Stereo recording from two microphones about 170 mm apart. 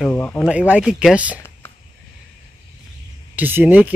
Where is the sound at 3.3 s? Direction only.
10° right (ahead or behind).